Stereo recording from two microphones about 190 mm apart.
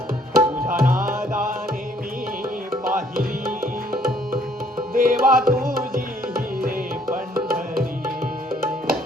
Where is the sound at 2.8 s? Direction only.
50° right (ahead or behind).